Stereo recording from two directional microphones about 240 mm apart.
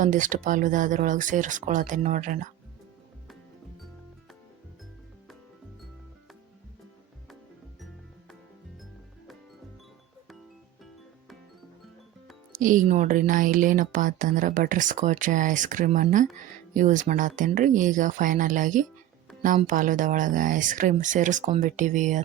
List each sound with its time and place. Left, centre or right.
0.0 s speech: right
12.5 s speech: right